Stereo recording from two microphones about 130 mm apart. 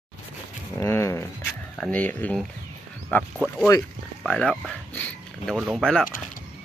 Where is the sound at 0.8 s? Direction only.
20° left (ahead or behind).